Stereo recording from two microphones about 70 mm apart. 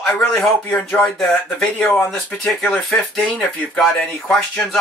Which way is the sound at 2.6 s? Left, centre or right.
Centre.